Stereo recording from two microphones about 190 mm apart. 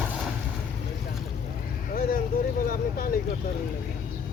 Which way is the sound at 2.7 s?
50° left (ahead or behind).